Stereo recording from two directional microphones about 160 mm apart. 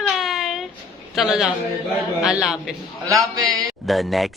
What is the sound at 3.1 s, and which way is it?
Speech, 20° right (ahead or behind).